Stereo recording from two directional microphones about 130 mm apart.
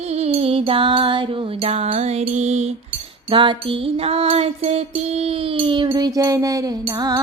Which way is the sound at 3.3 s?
40° right (ahead or behind).